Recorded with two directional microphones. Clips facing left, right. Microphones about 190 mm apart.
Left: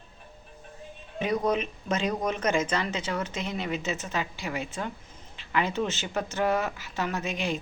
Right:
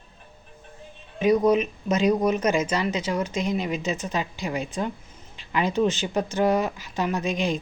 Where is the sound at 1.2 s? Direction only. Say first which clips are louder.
Right 7 dB; 10° right (ahead or behind).